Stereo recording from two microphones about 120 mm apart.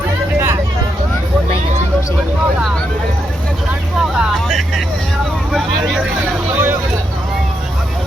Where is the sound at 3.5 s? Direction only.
5° right (ahead or behind).